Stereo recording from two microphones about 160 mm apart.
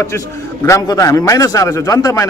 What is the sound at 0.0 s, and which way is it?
A man's voice, 20° left (ahead or behind).